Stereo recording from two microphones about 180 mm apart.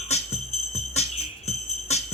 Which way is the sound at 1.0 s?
35° left (ahead or behind).